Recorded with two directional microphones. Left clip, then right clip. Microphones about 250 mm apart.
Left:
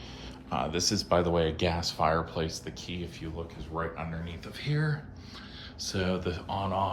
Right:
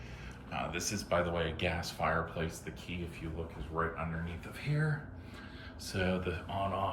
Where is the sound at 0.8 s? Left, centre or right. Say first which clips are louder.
Left 9 dB; left.